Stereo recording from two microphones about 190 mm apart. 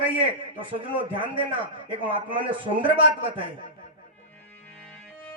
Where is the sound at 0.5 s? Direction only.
25° right (ahead or behind).